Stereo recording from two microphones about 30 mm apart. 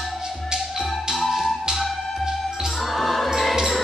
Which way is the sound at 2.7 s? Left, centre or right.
Centre.